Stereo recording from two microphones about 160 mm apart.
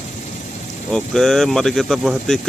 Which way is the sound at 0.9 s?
Centre (ahead or behind).